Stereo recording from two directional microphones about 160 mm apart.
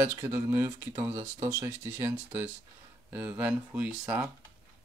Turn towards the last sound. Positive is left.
turn(degrees=-10)  # may be behind; listen again after turning